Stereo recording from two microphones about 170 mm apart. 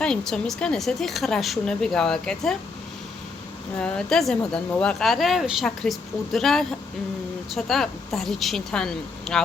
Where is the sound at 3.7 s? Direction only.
5° left (ahead or behind).